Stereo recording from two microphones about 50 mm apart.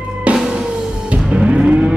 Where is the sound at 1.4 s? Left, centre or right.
Centre.